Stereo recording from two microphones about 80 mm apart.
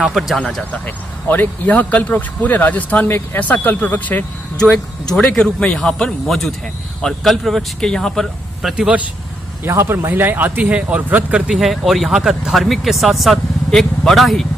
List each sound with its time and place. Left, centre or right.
0.0 s speech: centre
0.7 s speech: left
5.1 s speech: centre
8.7 s a man's voice: centre
9.7 s speech: right
11.4 s speech: centre